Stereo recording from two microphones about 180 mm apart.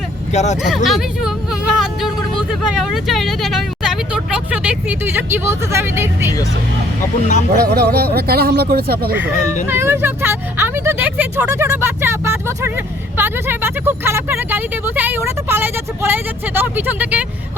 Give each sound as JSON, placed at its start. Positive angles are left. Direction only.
{"t": 0.3, "sound": "speech", "side_deg": 40}
{"t": 0.6, "sound": "speech", "side_deg": 0}
{"t": 7.2, "sound": "speech", "side_deg": 40}
{"t": 7.6, "sound": "speech", "side_deg": -60}
{"t": 9.6, "sound": "speech", "side_deg": -15}